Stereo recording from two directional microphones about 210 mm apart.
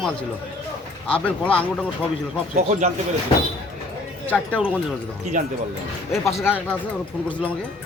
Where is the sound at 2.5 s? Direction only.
35° right (ahead or behind).